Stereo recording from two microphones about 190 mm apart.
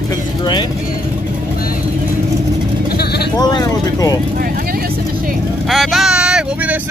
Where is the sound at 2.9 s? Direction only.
55° left (ahead or behind).